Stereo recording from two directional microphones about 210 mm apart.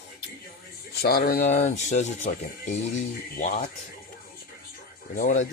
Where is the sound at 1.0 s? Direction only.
45° left (ahead or behind).